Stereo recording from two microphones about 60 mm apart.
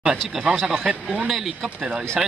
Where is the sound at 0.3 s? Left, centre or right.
Centre.